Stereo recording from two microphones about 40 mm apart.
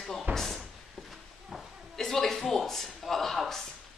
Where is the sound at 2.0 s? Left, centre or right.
Centre.